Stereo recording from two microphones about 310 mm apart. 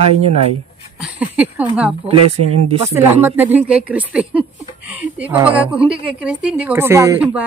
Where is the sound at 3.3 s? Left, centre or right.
Centre.